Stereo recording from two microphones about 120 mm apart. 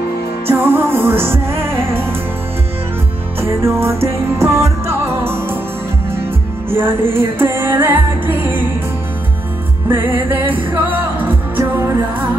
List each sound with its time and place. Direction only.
0.5 s music: 20° right (ahead or behind)
3.3 s music: 20° right (ahead or behind)
6.7 s music: 20° right (ahead or behind)
9.8 s music: 20° right (ahead or behind)